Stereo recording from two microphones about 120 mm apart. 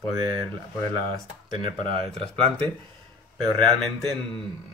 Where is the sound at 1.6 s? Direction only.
45° right (ahead or behind).